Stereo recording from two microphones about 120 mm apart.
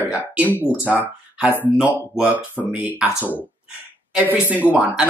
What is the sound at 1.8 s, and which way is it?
Speech, 15° left (ahead or behind).